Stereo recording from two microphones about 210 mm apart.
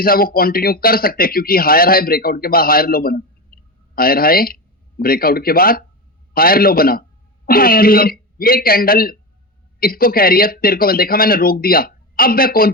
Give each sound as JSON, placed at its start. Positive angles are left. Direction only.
{"t": 0.0, "sound": "speech", "side_deg": 45}